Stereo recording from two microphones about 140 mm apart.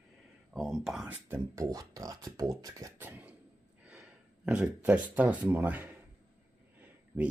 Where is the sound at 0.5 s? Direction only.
Centre (ahead or behind).